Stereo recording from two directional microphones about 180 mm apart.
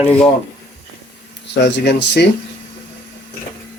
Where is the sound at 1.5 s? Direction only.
75° left (ahead or behind).